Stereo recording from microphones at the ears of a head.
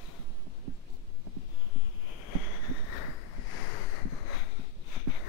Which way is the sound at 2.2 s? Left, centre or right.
Left.